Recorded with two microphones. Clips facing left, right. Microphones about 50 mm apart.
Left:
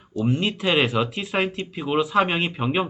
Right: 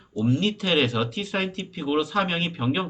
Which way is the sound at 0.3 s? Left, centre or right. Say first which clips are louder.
Left 1 dB; left.